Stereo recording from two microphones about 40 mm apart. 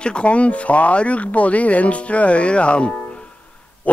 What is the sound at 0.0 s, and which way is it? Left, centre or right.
Speech, left.